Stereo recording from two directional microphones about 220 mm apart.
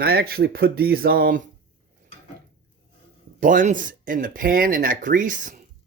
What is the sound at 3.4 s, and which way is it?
Speech, 35° right (ahead or behind).